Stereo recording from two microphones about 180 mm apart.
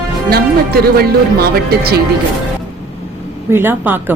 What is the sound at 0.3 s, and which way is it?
Speech, 60° right (ahead or behind).